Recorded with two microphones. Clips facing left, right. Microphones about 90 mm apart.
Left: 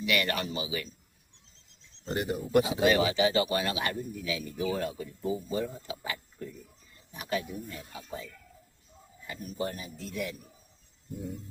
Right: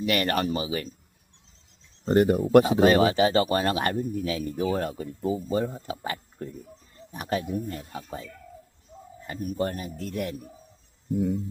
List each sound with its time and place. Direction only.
0.0 s speech: 45° right (ahead or behind)
2.0 s speech: 50° right (ahead or behind)